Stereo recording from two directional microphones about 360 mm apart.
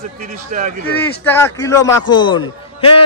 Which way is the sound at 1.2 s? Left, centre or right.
Centre.